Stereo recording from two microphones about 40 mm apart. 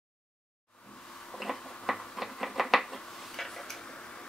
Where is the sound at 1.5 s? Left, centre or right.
Centre.